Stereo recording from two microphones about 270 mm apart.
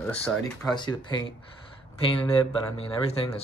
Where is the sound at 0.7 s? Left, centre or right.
Centre.